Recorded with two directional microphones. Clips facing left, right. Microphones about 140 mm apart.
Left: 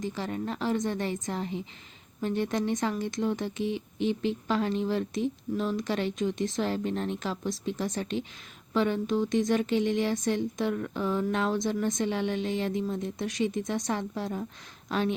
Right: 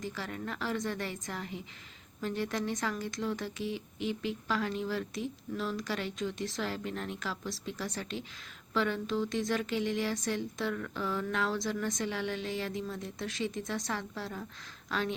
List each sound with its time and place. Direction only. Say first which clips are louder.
0.0 s speech: left 6 dB; 20° left (ahead or behind)